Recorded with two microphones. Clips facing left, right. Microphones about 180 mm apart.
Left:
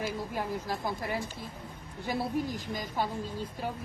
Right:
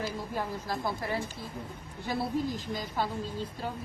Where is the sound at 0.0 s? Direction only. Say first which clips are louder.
Even; 15° left (ahead or behind).